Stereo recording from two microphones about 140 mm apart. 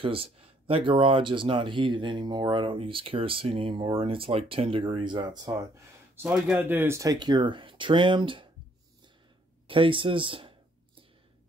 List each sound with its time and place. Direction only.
0.0 s speech: 40° right (ahead or behind)
6.1 s a man's voice: 5° right (ahead or behind)
6.6 s speech: 15° right (ahead or behind); by 8.5 s 35° right (ahead or behind)
9.7 s speech: 40° right (ahead or behind)